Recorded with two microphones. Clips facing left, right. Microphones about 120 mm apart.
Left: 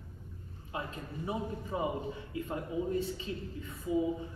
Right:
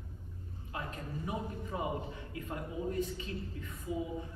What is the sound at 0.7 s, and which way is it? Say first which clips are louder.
A man's voice: left 2 dB; 20° left (ahead or behind).